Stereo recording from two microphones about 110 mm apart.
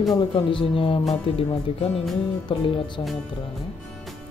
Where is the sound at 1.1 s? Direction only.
75° left (ahead or behind).